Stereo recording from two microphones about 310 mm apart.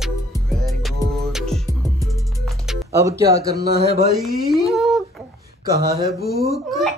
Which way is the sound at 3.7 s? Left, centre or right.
Left.